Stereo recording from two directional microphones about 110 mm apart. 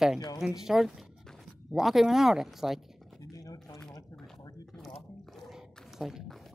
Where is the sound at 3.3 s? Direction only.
35° left (ahead or behind).